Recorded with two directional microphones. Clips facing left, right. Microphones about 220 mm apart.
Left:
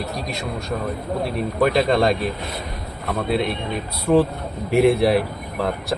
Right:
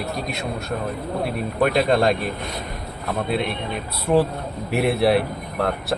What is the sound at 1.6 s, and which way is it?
Speech, centre (ahead or behind).